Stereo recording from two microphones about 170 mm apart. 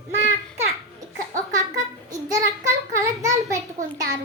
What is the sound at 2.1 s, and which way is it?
Child singing, 20° right (ahead or behind).